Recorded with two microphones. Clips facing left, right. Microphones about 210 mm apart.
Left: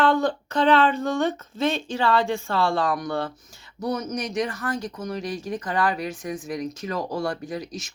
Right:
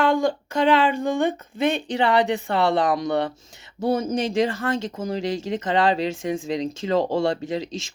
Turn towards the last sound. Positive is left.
turn(degrees=-25)  # may be behind; listen again after turning